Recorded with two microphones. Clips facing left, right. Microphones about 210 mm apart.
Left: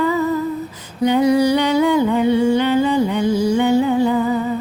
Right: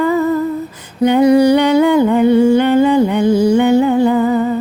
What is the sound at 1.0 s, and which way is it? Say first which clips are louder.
Humming: right 5 dB; 55° right (ahead or behind).